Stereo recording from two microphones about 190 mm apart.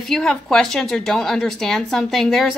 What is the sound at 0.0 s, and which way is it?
A woman's voice, centre (ahead or behind).